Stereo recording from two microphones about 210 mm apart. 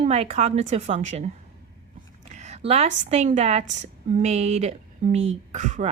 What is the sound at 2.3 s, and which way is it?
A woman's voice, 35° right (ahead or behind).